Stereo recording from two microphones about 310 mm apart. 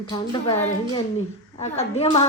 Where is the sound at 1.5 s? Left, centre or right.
Left.